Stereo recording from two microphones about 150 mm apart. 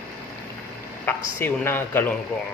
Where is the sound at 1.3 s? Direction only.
15° left (ahead or behind).